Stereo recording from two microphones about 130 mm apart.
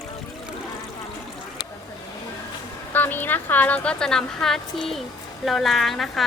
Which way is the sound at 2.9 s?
15° left (ahead or behind).